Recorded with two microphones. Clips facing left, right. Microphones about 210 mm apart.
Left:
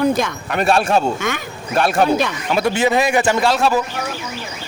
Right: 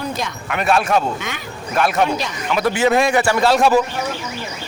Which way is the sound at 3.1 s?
20° left (ahead or behind).